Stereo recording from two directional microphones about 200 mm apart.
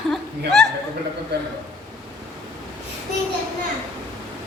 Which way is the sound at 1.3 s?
55° right (ahead or behind).